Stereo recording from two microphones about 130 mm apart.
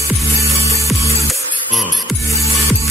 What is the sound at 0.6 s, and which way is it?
Music, 25° left (ahead or behind).